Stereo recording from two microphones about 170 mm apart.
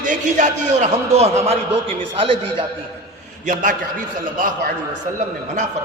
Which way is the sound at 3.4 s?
50° right (ahead or behind).